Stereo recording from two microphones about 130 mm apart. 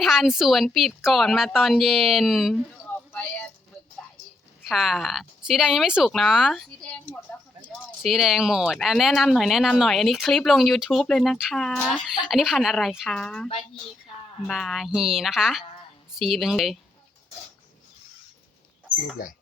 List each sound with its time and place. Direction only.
0.0 s speech: centre (ahead or behind)
3.1 s a sound: 10° left (ahead or behind)
4.7 s speech: centre (ahead or behind)
8.0 s speech: centre (ahead or behind)
19.2 s speech: 90° left